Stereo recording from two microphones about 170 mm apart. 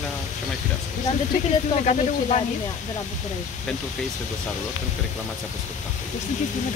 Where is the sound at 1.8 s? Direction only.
40° left (ahead or behind).